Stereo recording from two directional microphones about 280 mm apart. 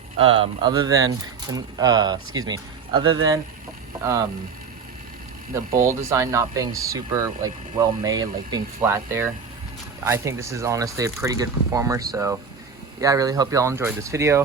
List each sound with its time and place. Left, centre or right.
0.2 s speech: centre
5.7 s speech: centre